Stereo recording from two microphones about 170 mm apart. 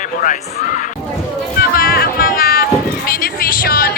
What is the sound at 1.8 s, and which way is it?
Music, 60° left (ahead or behind).